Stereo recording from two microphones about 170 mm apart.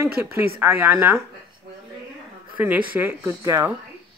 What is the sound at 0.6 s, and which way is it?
Speech, 10° right (ahead or behind).